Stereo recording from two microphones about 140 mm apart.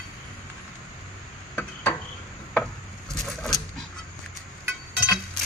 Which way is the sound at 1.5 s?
15° left (ahead or behind).